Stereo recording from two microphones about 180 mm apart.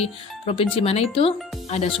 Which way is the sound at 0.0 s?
30° left (ahead or behind).